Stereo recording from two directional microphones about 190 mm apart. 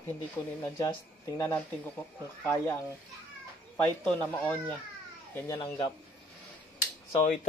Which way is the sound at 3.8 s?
5° left (ahead or behind).